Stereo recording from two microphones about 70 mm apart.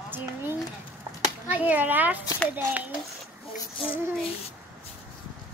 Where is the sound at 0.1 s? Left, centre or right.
Right.